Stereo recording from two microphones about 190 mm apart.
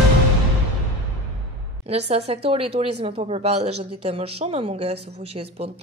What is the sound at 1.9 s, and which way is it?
Speech, 30° right (ahead or behind).